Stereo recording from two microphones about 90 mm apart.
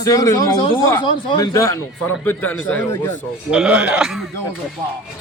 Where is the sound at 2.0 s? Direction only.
20° left (ahead or behind).